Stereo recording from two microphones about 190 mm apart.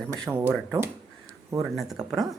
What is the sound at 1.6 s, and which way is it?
Speech, centre (ahead or behind).